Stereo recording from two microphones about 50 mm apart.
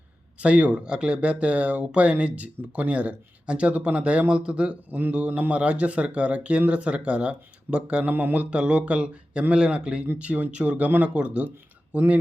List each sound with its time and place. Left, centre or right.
0.3 s speech: right
4.9 s speech: right
8.0 s speech: right
8.4 s speech: right
10.2 s speech: right